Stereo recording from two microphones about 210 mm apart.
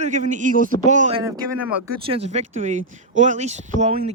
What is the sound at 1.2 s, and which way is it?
Speech, 20° right (ahead or behind).